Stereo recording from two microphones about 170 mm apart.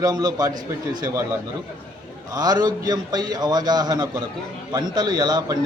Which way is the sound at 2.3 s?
25° right (ahead or behind).